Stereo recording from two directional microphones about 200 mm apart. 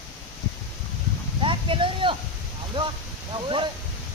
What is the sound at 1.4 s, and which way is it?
Speech, 25° right (ahead or behind).